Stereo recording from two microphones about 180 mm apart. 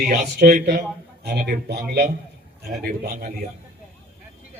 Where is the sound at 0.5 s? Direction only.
50° right (ahead or behind).